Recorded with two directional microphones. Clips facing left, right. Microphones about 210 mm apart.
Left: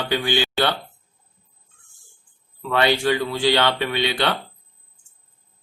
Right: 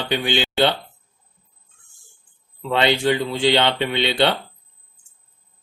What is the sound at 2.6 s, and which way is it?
Speech, 20° right (ahead or behind).